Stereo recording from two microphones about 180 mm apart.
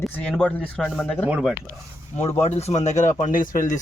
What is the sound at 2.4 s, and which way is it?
A man's voice, 35° left (ahead or behind).